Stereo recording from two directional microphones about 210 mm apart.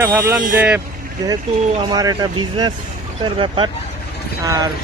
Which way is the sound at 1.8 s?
20° right (ahead or behind).